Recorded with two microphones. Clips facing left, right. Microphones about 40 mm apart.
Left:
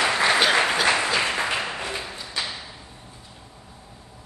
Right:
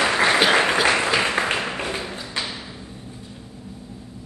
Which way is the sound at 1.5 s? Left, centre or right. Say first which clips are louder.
Right 2 dB; right.